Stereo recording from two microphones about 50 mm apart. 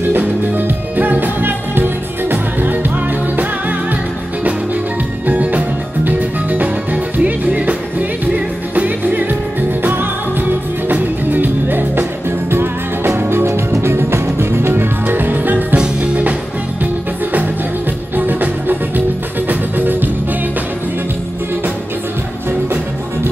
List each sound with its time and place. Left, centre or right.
0.1 s music: right
5.2 s music: right
10.9 s music: right
18.1 s music: right